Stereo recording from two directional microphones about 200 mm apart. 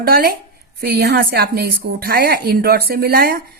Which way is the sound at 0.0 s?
50° right (ahead or behind).